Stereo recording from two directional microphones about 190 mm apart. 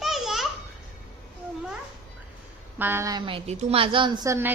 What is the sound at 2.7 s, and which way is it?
A woman's voice, 10° right (ahead or behind).